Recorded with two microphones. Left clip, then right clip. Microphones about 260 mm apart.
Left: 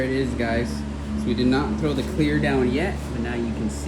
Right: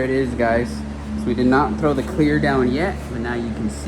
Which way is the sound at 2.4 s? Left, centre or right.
Centre.